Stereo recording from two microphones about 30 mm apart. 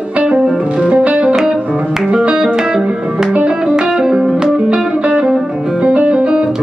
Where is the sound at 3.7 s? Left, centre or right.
Right.